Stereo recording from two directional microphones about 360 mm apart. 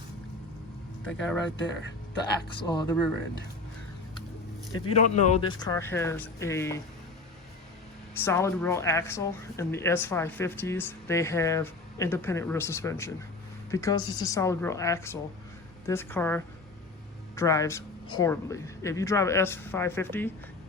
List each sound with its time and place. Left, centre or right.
1.0 s speech: centre
1.5 s speech: left
2.6 s speech: centre
4.7 s speech: centre
8.2 s speech: centre